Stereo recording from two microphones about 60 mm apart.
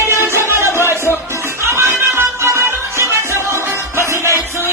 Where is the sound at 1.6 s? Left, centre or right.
Right.